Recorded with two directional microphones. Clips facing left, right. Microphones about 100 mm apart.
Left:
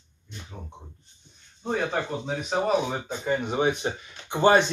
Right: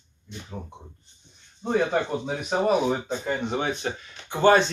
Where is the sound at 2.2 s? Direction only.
5° right (ahead or behind).